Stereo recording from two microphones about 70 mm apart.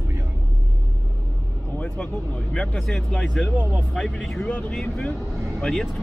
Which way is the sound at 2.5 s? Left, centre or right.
Centre.